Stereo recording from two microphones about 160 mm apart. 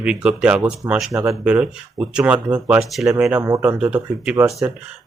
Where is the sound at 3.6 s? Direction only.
5° right (ahead or behind).